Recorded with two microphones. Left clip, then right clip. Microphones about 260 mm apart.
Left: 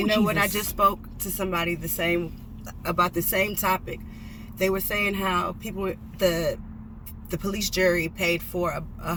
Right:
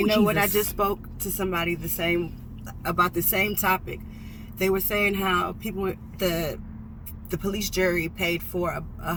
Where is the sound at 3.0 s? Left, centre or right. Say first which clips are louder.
Even; left.